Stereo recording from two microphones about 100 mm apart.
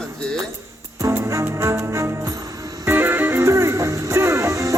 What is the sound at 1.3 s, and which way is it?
Music, 30° right (ahead or behind).